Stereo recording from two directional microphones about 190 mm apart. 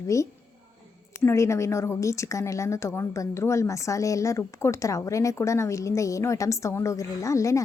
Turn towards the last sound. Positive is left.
turn(degrees=15)  # may be behind; listen again after turning